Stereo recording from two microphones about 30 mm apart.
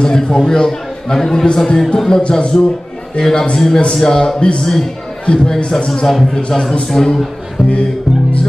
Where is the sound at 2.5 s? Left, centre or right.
Centre.